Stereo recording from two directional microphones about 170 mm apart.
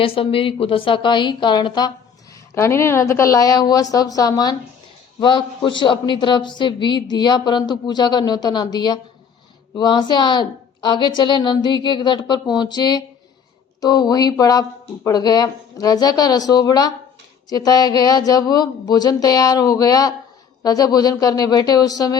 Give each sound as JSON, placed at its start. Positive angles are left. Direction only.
{"t": 0.0, "sound": "a man's voice", "side_deg": 35}
{"t": 2.6, "sound": "a woman's voice", "side_deg": 15}